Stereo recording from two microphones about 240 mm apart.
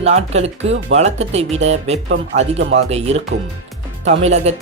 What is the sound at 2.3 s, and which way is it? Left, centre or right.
Speech, right.